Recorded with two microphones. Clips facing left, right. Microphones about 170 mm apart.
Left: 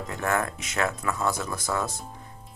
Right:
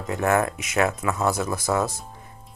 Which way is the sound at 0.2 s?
20° right (ahead or behind).